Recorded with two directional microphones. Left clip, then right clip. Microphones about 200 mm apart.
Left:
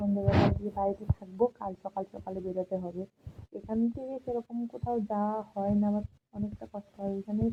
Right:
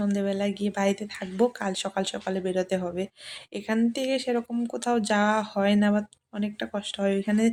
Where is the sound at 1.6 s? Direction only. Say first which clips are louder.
Right 7 dB; 30° right (ahead or behind).